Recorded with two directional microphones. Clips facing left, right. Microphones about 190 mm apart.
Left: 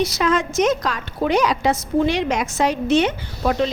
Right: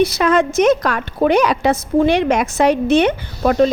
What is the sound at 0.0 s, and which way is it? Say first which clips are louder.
A woman's voice: right 5 dB; 60° right (ahead or behind).